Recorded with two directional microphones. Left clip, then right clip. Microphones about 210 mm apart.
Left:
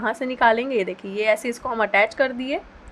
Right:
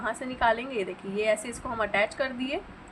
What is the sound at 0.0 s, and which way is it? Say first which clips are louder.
A woman's voice: left 7 dB; 50° left (ahead or behind).